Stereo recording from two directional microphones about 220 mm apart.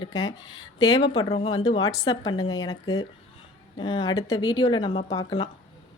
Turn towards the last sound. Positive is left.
turn(degrees=20)  # may be behind; listen again after turning